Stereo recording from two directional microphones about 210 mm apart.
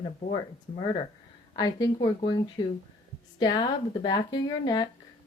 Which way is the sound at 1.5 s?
20° left (ahead or behind).